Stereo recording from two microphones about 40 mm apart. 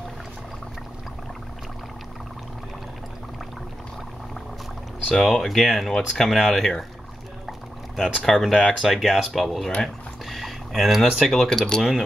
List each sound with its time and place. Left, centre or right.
5.1 s speech: centre
7.4 s pour: centre
8.3 s speech: centre
8.5 s speech: left
8.8 s speech: centre
11.4 s speech: centre